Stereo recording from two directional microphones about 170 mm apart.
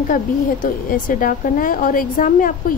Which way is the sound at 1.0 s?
55° left (ahead or behind).